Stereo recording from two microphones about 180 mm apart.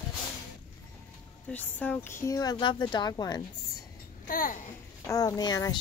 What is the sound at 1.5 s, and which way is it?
Speech, 10° left (ahead or behind).